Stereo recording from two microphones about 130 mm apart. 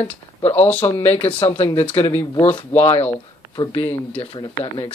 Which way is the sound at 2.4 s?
50° left (ahead or behind).